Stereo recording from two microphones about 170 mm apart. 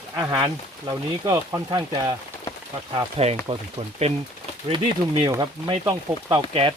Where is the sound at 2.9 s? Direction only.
35° right (ahead or behind).